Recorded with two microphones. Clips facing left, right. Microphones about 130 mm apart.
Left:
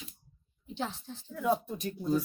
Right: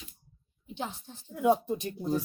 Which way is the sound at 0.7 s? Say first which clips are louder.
Left 1 dB; 15° right (ahead or behind).